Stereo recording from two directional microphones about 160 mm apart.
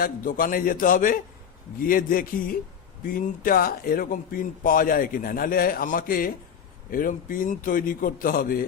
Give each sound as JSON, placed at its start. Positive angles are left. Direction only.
{"t": 0.0, "sound": "speech", "side_deg": 60}